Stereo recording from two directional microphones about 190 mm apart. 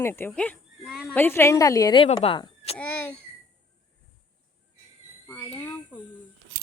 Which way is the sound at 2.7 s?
10° left (ahead or behind).